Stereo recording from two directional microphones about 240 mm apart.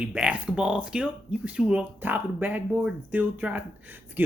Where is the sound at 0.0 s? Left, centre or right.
Centre.